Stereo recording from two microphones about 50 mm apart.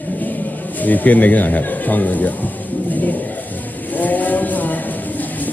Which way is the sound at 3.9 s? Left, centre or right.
Left.